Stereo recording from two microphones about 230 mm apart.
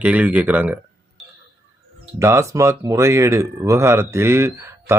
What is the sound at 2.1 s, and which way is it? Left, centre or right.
Speech, centre.